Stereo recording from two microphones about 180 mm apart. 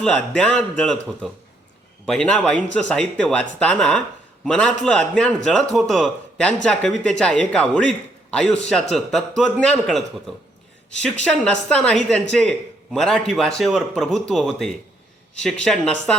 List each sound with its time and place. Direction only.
0.0 s speech: 5° left (ahead or behind)